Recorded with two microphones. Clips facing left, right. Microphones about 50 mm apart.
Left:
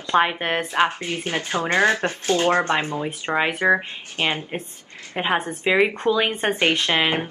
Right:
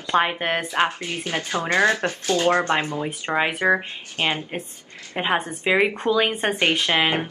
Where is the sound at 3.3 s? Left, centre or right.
Centre.